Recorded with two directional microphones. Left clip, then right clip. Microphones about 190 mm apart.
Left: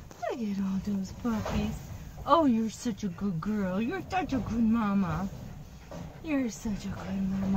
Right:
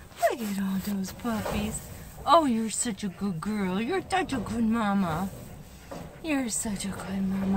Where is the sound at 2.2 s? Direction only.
45° right (ahead or behind).